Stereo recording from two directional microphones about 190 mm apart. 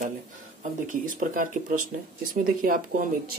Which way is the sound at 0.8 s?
45° right (ahead or behind).